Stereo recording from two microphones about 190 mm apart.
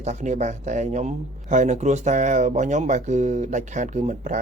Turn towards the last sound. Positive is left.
turn(degrees=-40)  # may be behind; listen again after turning